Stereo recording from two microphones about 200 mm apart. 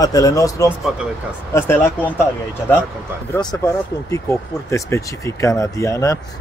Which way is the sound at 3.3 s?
20° left (ahead or behind).